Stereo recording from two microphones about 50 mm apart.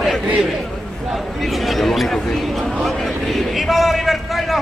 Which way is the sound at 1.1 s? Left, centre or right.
Centre.